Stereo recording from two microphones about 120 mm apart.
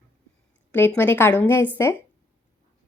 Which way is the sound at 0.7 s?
20° left (ahead or behind).